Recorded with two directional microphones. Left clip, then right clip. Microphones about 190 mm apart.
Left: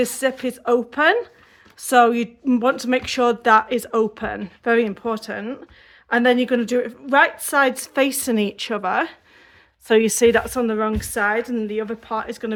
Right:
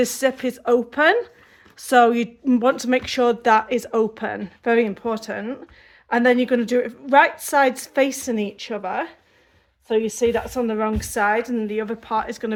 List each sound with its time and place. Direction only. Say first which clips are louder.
0.0 s speech: right 1 dB; centre (ahead or behind); by 9.1 s 25° left (ahead or behind)
9.8 s a woman's voice: left 5 dB; 40° left (ahead or behind); by 10.8 s 20° left (ahead or behind)
10.8 s speech: even; 5° left (ahead or behind)